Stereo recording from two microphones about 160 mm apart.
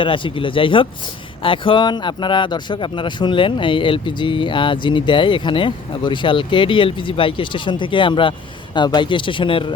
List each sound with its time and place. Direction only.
0.0 s speech: 30° left (ahead or behind)